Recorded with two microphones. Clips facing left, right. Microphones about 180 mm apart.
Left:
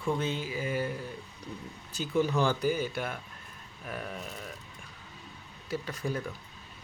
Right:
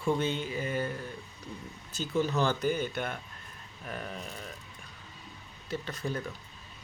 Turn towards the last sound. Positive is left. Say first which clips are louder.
# left 1 dB
turn(degrees=10)  # may be behind; listen again after turning